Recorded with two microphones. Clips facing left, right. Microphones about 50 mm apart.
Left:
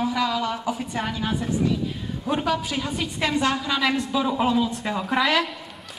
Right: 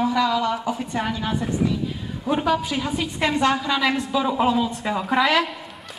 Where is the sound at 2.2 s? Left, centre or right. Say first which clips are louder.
Right 3 dB; centre.